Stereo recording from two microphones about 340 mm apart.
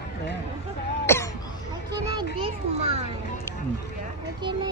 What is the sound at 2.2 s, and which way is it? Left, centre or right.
Children playing, centre.